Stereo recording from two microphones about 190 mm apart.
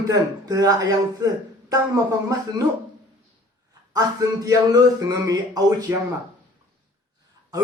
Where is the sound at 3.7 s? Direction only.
20° right (ahead or behind).